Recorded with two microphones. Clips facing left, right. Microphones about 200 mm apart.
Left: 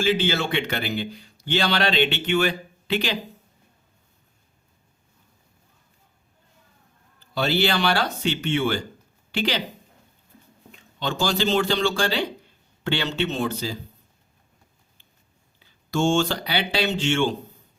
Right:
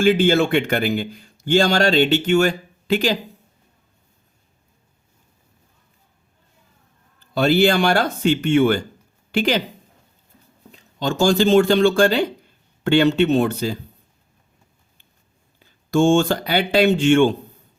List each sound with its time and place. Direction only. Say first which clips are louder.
0.0 s speech: right 7 dB; 50° right (ahead or behind)
7.3 s speech: right 7 dB; 50° right (ahead or behind)
10.7 s speech: right 5 dB; 40° right (ahead or behind); by 13.7 s 55° right (ahead or behind)
15.5 s speech: right 7 dB; 50° right (ahead or behind)